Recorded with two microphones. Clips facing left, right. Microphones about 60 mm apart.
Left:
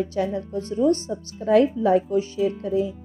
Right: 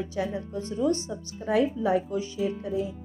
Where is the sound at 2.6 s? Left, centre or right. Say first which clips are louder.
Left 6 dB; left.